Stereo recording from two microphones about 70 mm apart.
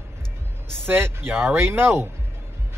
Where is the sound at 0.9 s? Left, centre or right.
Right.